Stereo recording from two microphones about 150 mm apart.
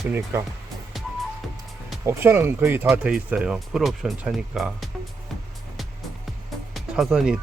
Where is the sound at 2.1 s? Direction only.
15° right (ahead or behind).